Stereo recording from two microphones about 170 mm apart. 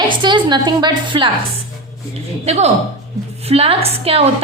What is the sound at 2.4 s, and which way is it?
A woman's voice, 40° right (ahead or behind).